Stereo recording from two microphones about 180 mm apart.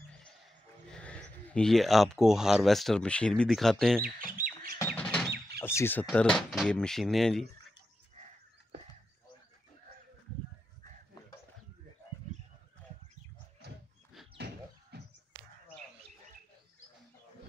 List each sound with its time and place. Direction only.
0.8 s speech: 5° left (ahead or behind)
4.3 s squawk: 50° right (ahead or behind)
4.7 s drum: 10° left (ahead or behind)
5.6 s speech: 15° left (ahead or behind)
13.6 s dog: 65° right (ahead or behind)
14.3 s a sound: 65° right (ahead or behind)